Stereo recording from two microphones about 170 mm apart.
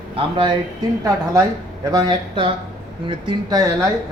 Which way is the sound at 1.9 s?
25° right (ahead or behind).